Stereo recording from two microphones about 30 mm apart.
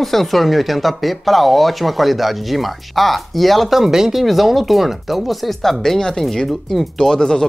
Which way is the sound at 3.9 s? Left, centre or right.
Centre.